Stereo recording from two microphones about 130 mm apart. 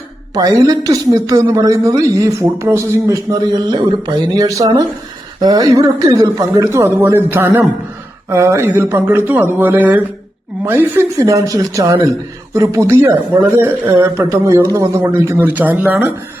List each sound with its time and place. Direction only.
0.3 s a man's voice: 30° right (ahead or behind)